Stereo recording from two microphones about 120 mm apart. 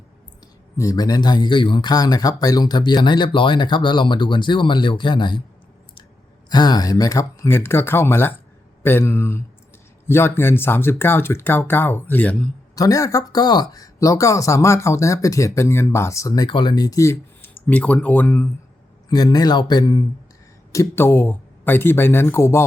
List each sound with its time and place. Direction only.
0.8 s speech: 30° left (ahead or behind)
6.5 s speech: 35° left (ahead or behind); by 12.5 s 10° left (ahead or behind)
12.7 s speech: 30° left (ahead or behind)
17.7 s speech: 10° left (ahead or behind)
19.1 s speech: 35° left (ahead or behind)
20.7 s speech: 20° left (ahead or behind)